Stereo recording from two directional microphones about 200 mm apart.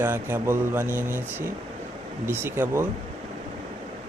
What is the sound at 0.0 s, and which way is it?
Speech, 10° right (ahead or behind).